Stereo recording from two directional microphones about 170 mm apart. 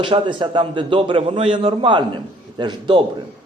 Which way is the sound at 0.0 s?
30° right (ahead or behind).